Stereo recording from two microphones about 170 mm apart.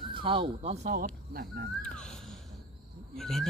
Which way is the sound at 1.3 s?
60° right (ahead or behind).